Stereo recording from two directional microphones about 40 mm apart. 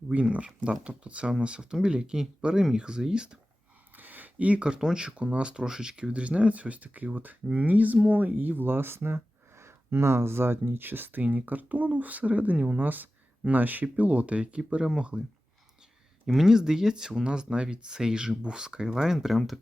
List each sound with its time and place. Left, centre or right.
0.1 s speech: right; by 3.2 s centre
3.9 s a sound: right
4.6 s speech: right
9.9 s speech: right
13.8 s speech: right
16.2 s speech: centre